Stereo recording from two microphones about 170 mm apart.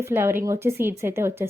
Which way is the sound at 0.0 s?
15° right (ahead or behind).